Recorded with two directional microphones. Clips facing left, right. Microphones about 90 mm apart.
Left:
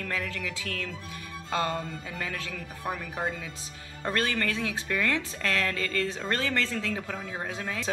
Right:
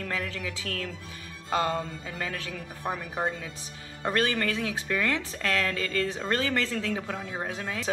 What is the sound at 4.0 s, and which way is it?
Speech, 15° right (ahead or behind).